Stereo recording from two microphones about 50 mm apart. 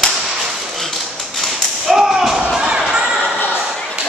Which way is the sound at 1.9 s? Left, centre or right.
Centre.